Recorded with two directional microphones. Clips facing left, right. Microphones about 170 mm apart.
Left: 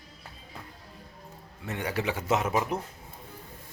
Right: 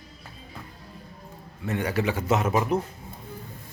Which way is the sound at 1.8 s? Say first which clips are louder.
Right 4 dB; 20° left (ahead or behind).